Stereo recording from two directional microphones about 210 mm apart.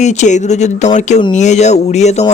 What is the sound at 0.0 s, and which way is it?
Speech, 35° left (ahead or behind).